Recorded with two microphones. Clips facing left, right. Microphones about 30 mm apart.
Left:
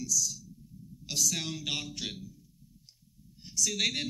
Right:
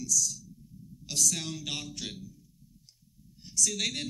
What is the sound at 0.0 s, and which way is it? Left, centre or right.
A man's voice, centre.